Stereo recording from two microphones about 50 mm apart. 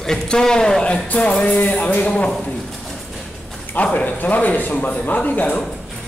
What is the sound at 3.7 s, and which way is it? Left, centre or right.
Speech, left.